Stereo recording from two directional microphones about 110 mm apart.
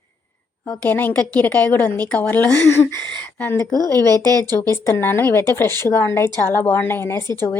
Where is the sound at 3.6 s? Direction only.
35° left (ahead or behind).